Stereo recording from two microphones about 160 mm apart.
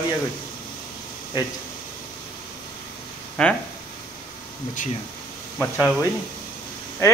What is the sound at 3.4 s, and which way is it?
Speech, 5° left (ahead or behind).